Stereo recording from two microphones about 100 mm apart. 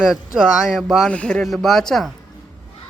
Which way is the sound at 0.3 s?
5° right (ahead or behind).